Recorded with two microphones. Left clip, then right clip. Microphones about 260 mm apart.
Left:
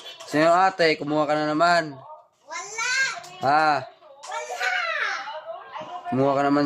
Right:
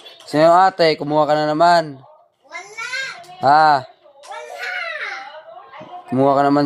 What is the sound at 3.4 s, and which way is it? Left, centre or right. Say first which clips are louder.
Speech: right 8 dB; centre.